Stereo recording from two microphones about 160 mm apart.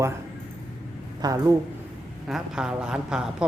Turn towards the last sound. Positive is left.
turn(degrees=-5)  # may be behind; listen again after turning